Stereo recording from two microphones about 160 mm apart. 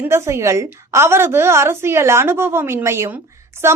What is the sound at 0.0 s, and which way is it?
A woman's voice, 15° right (ahead or behind).